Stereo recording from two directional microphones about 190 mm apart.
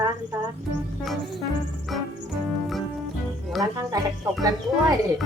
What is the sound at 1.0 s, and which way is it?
Music, centre (ahead or behind).